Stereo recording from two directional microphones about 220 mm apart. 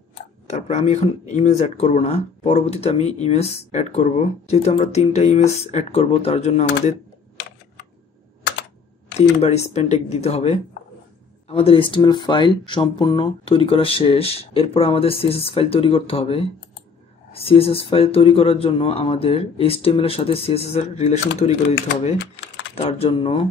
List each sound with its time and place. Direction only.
0.5 s speech: 30° left (ahead or behind)
9.4 s speech: 30° left (ahead or behind)
22.8 s speech: 25° left (ahead or behind)